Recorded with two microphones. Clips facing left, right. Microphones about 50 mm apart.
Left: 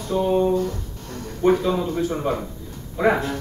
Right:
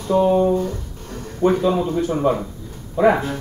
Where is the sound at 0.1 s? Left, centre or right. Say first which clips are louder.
Right 5 dB; right.